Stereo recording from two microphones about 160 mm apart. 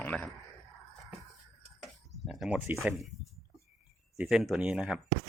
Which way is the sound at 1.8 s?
Centre (ahead or behind).